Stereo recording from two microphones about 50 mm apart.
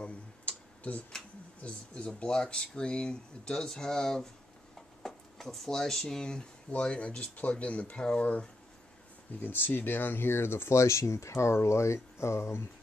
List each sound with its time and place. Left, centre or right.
0.0 s tick-tock: left
1.6 s speech: left
9.4 s speech: left
10.8 s speech: left